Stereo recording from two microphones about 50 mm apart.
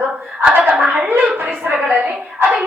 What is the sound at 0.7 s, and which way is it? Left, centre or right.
A woman's voice, right.